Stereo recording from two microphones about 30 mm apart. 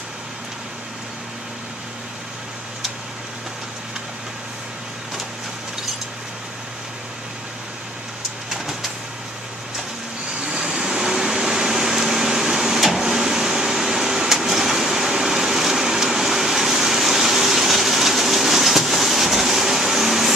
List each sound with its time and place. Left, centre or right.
10.4 s vehicle: right
11.3 s printer: centre
13.0 s vehicle: centre